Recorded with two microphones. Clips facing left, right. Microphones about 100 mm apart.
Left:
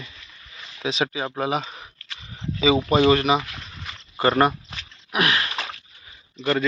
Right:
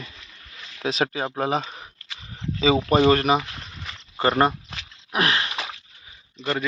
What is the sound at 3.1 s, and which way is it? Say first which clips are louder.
Speech: even; 40° right (ahead or behind).